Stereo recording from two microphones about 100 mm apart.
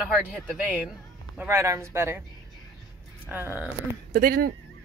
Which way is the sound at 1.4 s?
25° right (ahead or behind).